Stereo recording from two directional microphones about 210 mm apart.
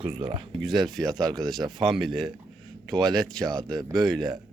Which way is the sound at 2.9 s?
15° right (ahead or behind).